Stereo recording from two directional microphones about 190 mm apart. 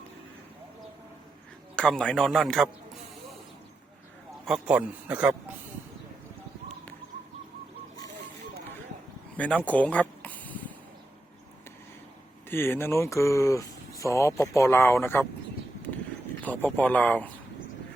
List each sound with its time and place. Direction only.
1.7 s a man's voice: 5° left (ahead or behind)
4.4 s a man's voice: 5° right (ahead or behind)
9.6 s a sound: 5° left (ahead or behind)
12.5 s speech: 10° left (ahead or behind)
16.4 s speech: 10° left (ahead or behind)